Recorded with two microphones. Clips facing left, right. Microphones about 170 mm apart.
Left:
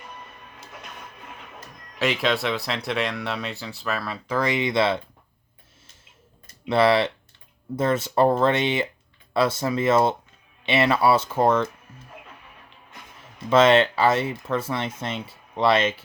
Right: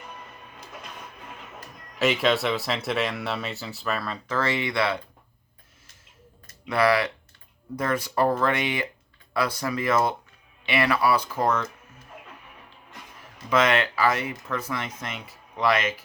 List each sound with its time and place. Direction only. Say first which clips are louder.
2.0 s speech: right 1 dB; centre (ahead or behind); by 4.9 s 25° left (ahead or behind)
6.5 s speech: left 3 dB; 25° left (ahead or behind)
13.5 s speech: left 6 dB; 25° left (ahead or behind)